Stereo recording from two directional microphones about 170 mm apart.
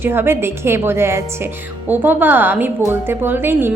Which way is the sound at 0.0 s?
15° right (ahead or behind).